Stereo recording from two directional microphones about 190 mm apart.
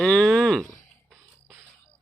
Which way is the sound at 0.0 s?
5° left (ahead or behind).